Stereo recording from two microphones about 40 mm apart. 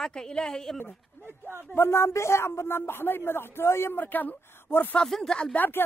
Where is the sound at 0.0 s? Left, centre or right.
Centre.